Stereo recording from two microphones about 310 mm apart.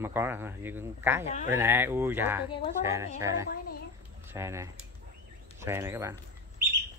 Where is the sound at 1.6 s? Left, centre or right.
Centre.